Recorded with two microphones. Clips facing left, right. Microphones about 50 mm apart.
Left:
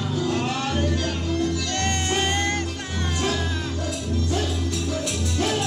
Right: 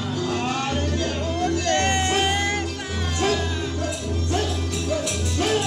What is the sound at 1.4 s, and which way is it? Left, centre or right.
Music, right.